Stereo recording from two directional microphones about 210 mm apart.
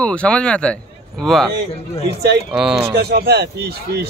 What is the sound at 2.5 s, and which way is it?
Speech, 5° right (ahead or behind).